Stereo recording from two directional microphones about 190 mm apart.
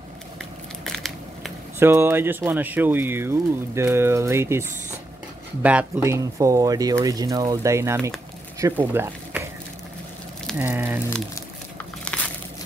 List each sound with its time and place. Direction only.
0.8 s crushing: centre (ahead or behind)
1.8 s speech: 10° right (ahead or behind)
10.6 s speech: 10° right (ahead or behind)
12.0 s biting: 5° left (ahead or behind)